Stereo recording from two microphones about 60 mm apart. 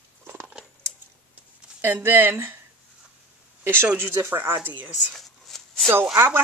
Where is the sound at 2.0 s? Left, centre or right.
Right.